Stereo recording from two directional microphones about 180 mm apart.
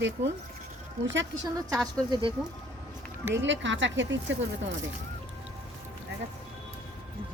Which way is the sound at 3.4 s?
90° right.